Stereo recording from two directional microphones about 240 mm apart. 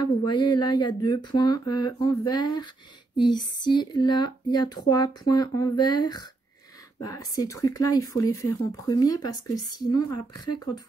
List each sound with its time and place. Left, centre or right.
0.0 s speech: centre